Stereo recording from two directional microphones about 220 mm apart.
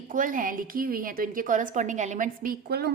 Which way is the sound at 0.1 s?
35° right (ahead or behind).